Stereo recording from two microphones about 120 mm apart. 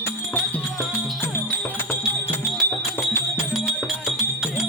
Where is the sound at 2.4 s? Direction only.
Centre (ahead or behind).